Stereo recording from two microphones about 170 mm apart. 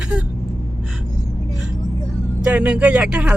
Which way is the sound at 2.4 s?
5° right (ahead or behind).